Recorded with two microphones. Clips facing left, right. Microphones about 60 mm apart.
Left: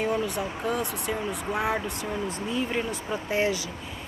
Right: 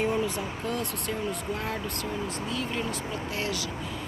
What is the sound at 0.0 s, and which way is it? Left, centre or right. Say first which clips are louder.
Speech: left 1 dB; centre.